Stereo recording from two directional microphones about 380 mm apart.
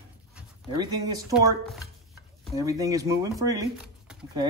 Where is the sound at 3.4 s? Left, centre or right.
Centre.